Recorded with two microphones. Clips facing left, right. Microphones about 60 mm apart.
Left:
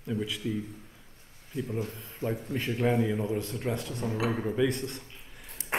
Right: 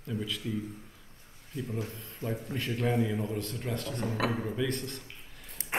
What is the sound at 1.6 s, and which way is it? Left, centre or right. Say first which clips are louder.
Speech: left 3 dB; left.